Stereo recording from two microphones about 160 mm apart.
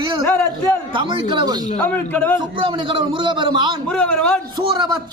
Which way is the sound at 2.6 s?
30° right (ahead or behind).